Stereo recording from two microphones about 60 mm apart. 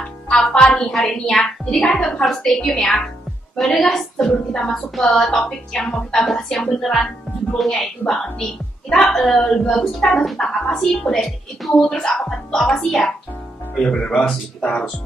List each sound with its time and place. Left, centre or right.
0.3 s a woman's voice: centre